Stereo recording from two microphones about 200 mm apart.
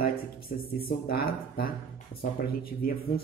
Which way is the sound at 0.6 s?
50° left (ahead or behind).